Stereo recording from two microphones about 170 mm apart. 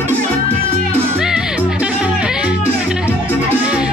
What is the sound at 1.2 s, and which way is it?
Music, 5° right (ahead or behind).